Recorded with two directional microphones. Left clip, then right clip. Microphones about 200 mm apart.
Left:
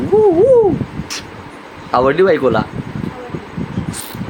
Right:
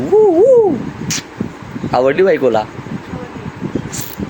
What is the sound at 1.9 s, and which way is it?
Speech, 5° right (ahead or behind).